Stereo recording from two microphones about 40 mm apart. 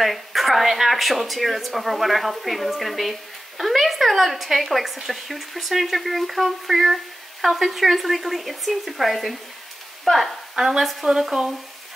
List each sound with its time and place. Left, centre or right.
0.0 s a woman's voice: centre
10.5 s speech: centre
10.8 s speech: centre